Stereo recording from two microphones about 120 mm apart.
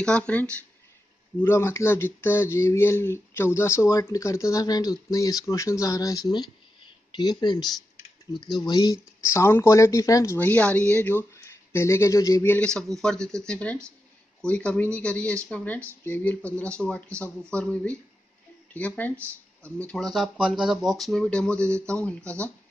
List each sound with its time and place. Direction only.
0.0 s speech: 10° left (ahead or behind); by 9.0 s 35° left (ahead or behind)
9.2 s speech: 25° left (ahead or behind)
12.4 s speech: 10° left (ahead or behind)